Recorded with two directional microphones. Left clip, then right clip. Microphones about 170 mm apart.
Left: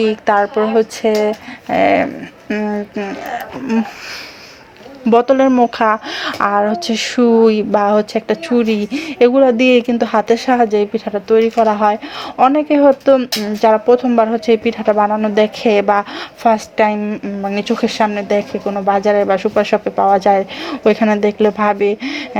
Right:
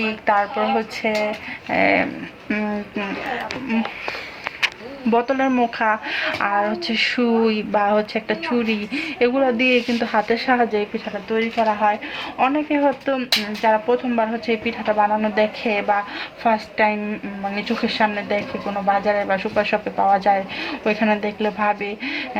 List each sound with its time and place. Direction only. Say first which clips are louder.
0.0 s speech: left 6 dB; 45° left (ahead or behind)
2.5 s speech: left 5 dB; 25° left (ahead or behind)
5.1 s speech: left 8 dB; 45° left (ahead or behind); by 10.7 s 25° left (ahead or behind)
10.7 s speech: left 7 dB; 40° left (ahead or behind)
11.3 s speech: left 8 dB; 60° left (ahead or behind); by 15.4 s 35° left (ahead or behind)
15.6 s speech: left 7 dB; 50° left (ahead or behind)